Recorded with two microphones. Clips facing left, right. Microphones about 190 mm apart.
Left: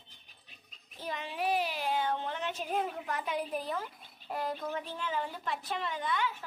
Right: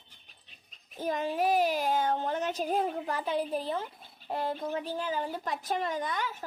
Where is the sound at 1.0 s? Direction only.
45° right (ahead or behind).